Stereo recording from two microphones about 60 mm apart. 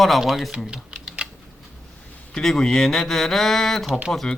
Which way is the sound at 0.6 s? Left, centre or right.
Centre.